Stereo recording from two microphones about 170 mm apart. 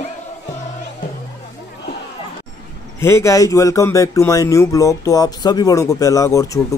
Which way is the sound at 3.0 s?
15° left (ahead or behind).